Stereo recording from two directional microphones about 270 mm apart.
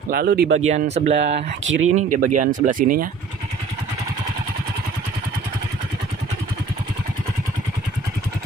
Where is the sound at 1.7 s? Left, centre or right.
Right.